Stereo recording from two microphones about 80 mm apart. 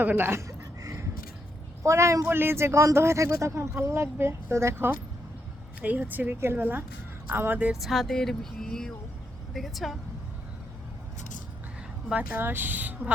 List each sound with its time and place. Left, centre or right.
0.0 s a sound: right
1.8 s speech: right
2.3 s speech: right
7.7 s speech: centre
12.1 s speech: right